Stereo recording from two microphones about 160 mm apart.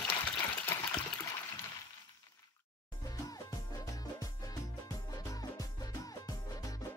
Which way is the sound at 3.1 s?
20° left (ahead or behind).